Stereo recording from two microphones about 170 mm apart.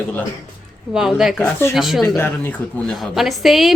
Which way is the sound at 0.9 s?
5° right (ahead or behind).